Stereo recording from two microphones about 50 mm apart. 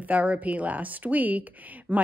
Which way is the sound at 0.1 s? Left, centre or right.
Right.